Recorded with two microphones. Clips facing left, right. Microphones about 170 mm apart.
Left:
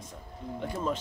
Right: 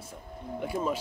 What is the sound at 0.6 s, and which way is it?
Speech, 10° right (ahead or behind).